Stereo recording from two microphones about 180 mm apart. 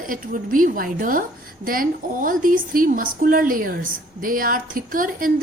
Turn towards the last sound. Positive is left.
turn(degrees=-50)  # may be behind; listen again after turning